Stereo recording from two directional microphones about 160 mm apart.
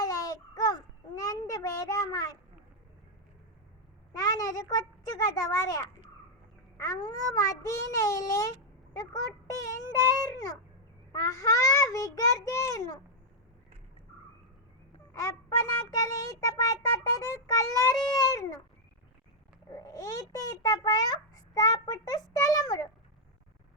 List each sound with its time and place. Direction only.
0.0 s child singing: 25° left (ahead or behind)
4.1 s a child's voice: 25° left (ahead or behind)
6.7 s a sound: 20° left (ahead or behind)
7.3 s a child's voice: 20° left (ahead or behind)
9.6 s a child's voice: 20° left (ahead or behind)
15.1 s a child's voice: 20° left (ahead or behind)
19.7 s a child's voice: 20° left (ahead or behind)